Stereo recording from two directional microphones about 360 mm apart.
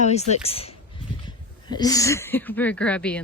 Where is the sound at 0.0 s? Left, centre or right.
Centre.